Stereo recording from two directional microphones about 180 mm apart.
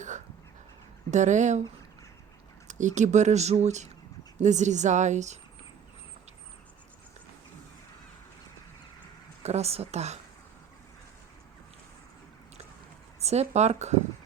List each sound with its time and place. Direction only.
1.1 s speech: 40° right (ahead or behind)
2.6 s speech: 45° right (ahead or behind)
9.4 s speech: 35° right (ahead or behind)
13.1 s speech: 35° right (ahead or behind)